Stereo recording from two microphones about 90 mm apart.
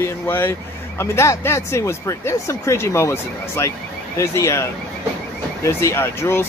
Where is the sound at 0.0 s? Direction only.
25° left (ahead or behind).